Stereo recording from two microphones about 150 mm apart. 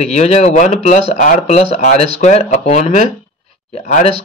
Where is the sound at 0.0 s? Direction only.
45° left (ahead or behind).